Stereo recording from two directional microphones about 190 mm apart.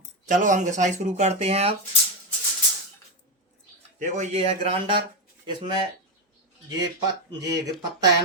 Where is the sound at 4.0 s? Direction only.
40° right (ahead or behind).